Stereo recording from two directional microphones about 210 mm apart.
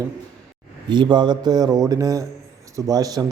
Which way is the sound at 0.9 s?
20° right (ahead or behind).